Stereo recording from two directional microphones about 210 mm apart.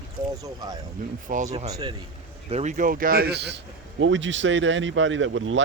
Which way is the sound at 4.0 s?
60° right (ahead or behind).